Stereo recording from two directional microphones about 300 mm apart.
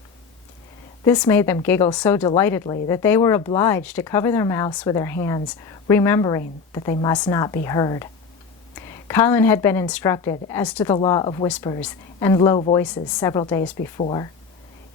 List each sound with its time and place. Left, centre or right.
1.0 s speech: centre
11.4 s speech: centre